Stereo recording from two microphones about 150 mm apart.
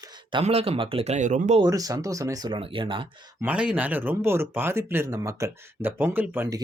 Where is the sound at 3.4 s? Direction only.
10° right (ahead or behind).